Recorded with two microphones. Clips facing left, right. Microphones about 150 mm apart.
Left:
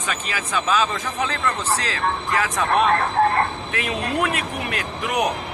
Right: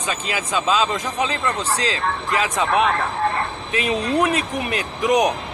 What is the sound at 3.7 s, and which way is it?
Speech, 20° right (ahead or behind).